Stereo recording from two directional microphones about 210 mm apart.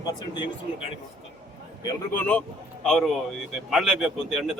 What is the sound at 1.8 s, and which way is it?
Speech, 20° left (ahead or behind).